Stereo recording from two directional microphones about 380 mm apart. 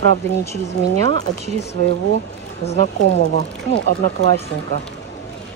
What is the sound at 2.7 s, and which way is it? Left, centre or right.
Speech, centre.